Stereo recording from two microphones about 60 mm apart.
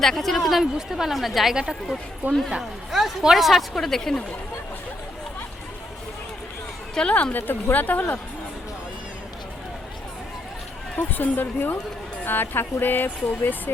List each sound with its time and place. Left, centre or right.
0.0 s speech: centre
2.2 s speech: right
2.6 s speech: centre
6.9 s a woman's voice: centre
10.9 s speech: left